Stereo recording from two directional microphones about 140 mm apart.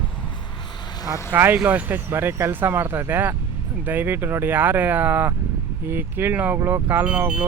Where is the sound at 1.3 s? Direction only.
15° right (ahead or behind).